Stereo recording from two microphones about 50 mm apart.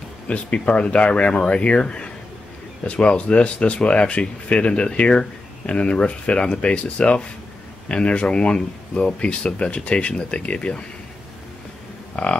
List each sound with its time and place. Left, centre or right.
0.3 s speech: left